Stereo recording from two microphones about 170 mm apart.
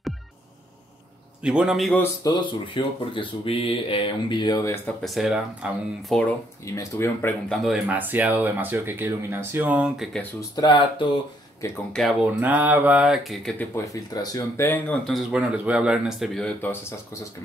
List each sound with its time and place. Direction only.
1.4 s speech: 5° right (ahead or behind)
2.2 s speech: 30° left (ahead or behind)
4.8 s speech: centre (ahead or behind)
6.6 s speech: 15° left (ahead or behind)
7.5 s speech: centre (ahead or behind)
10.5 s speech: 25° left (ahead or behind)
11.9 s speech: centre (ahead or behind)
12.3 s speech: 10° right (ahead or behind)
13.6 s speech: 20° left (ahead or behind)
15.0 s speech: centre (ahead or behind)